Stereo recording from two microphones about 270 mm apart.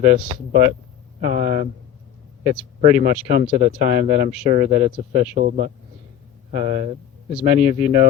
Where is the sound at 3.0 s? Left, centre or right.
Right.